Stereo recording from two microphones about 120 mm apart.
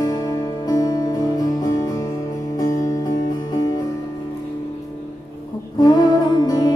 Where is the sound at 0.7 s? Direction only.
30° left (ahead or behind).